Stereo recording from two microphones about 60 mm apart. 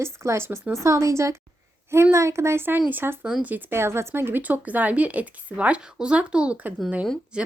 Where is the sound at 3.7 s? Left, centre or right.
Right.